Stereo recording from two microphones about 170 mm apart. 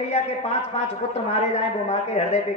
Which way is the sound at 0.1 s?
40° left (ahead or behind).